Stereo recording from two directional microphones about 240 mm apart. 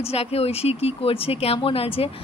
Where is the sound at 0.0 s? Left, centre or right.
Left.